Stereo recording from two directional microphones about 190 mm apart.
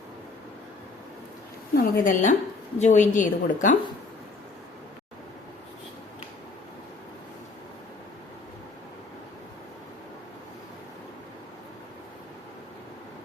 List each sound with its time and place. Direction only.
1.7 s a woman's voice: 50° left (ahead or behind)